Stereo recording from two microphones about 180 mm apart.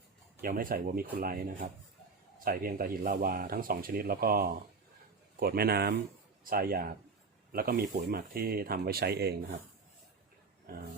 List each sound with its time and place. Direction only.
0.4 s speech: 55° right (ahead or behind)